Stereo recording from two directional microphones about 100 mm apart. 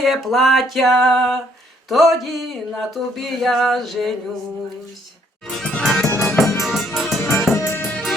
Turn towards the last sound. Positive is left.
turn(degrees=20)  # may be behind; listen again after turning